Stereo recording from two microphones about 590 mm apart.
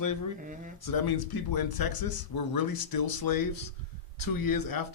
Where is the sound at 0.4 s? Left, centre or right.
Centre.